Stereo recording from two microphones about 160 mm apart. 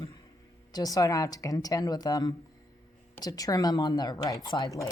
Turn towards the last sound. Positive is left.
turn(degrees=20)  # may be behind; listen again after turning